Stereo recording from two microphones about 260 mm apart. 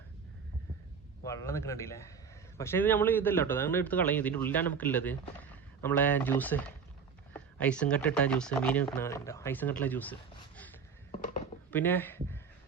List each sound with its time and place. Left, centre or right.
1.2 s a man's voice: centre